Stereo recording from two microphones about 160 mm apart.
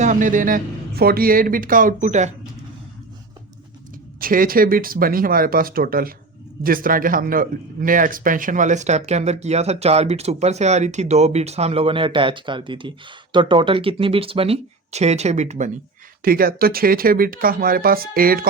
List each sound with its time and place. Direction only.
0.0 s speech: 55° right (ahead or behind)
4.2 s speech: 60° right (ahead or behind)
16.2 s speech: 65° right (ahead or behind)